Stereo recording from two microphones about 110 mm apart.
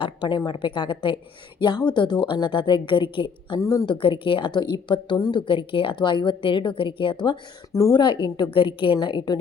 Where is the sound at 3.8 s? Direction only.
50° left (ahead or behind).